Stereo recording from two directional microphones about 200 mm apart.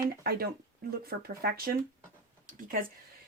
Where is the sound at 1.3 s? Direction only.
50° right (ahead or behind).